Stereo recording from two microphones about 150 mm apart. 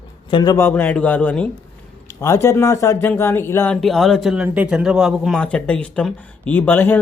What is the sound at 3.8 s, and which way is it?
Speech, centre (ahead or behind).